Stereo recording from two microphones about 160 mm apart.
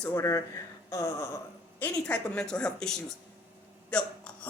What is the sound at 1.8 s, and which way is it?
A woman's voice, 5° left (ahead or behind).